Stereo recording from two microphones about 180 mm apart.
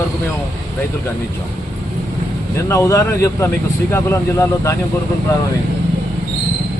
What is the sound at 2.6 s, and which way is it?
Speech, 15° left (ahead or behind).